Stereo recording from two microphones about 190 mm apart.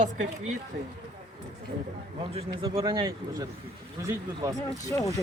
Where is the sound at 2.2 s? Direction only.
25° right (ahead or behind).